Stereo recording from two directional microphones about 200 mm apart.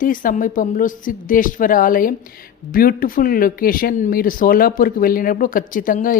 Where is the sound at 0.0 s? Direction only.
45° left (ahead or behind).